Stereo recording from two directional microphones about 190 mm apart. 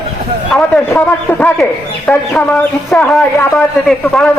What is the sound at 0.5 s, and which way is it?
A man's voice, 10° left (ahead or behind).